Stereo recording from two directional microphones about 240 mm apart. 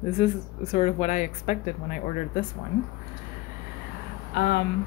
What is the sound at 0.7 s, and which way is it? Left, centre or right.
A woman's voice, left.